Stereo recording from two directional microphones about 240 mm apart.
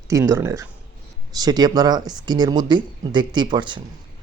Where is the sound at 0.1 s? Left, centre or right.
Centre.